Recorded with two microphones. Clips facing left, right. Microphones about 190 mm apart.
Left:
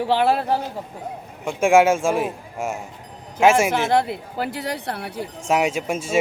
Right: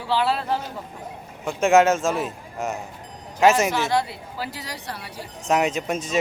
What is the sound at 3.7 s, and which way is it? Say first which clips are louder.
Speech: left 3 dB; 55° left (ahead or behind).